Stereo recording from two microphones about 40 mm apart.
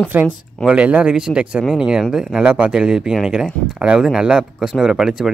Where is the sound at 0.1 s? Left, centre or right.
Right.